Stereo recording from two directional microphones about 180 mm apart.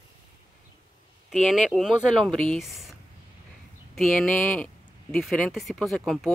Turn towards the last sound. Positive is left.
turn(degrees=0)  # may be behind; listen again after turning